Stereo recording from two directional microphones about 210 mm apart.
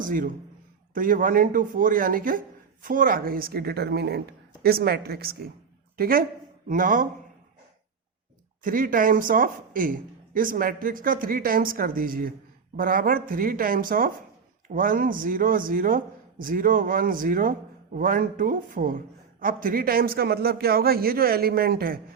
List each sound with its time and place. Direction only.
0.0 s a man's voice: 40° right (ahead or behind)
8.6 s a man's voice: 40° right (ahead or behind)